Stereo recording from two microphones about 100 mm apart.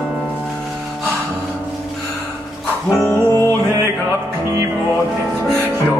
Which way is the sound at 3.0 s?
30° left (ahead or behind).